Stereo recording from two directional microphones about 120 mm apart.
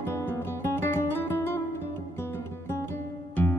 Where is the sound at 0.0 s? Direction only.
20° left (ahead or behind).